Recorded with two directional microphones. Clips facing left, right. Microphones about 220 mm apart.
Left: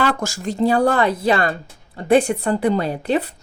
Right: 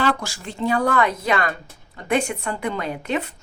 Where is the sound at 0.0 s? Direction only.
45° left (ahead or behind).